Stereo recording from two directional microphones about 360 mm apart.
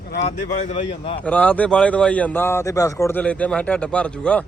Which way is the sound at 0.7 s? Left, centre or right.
Centre.